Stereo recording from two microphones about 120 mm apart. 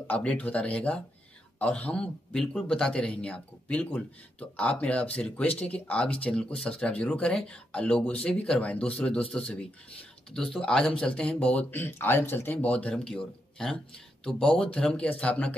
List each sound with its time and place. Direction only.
0.0 s speech: 10° left (ahead or behind)